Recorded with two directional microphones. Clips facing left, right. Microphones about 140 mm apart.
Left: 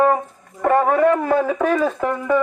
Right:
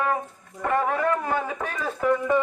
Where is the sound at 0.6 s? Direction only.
50° left (ahead or behind); by 1.7 s 90° left.